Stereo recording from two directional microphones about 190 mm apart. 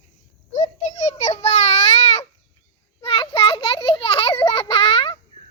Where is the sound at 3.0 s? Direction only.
30° left (ahead or behind).